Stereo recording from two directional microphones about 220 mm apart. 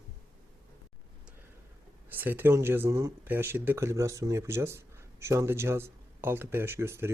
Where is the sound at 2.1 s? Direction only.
10° right (ahead or behind).